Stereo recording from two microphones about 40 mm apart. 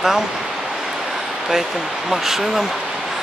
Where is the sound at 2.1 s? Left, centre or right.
Centre.